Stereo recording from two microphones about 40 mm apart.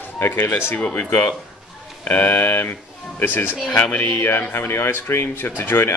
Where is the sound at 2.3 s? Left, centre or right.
Left.